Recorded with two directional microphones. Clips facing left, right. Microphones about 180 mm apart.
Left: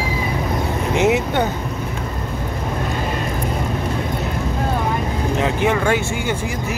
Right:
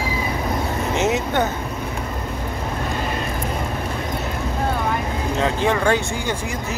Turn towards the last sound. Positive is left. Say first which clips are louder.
# left 1 dB
turn(degrees=15)  # may be behind; listen again after turning